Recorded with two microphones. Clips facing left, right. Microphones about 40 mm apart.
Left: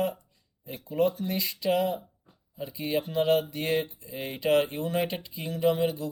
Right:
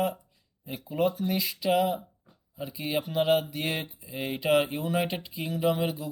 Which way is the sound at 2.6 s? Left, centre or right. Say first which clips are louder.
Left 1 dB; centre.